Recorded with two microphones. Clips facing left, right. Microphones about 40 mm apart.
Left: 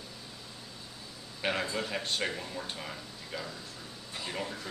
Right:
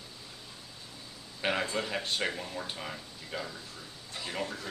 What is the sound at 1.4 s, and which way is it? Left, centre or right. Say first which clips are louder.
Speech: right 1 dB; centre.